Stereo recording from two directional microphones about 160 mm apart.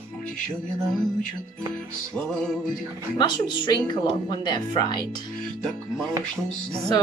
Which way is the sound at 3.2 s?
30° left (ahead or behind).